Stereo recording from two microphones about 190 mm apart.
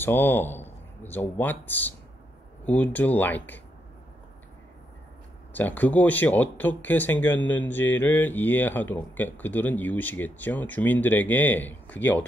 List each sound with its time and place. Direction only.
0.0 s a man's voice: 10° left (ahead or behind)
5.5 s speech: 10° left (ahead or behind)